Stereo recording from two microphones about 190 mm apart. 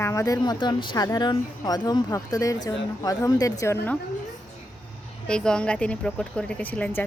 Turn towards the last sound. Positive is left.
turn(degrees=10)  # may be behind; listen again after turning